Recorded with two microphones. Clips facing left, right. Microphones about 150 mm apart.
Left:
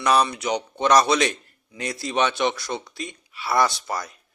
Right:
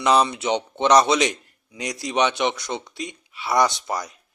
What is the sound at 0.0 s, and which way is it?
A man's voice, 20° right (ahead or behind).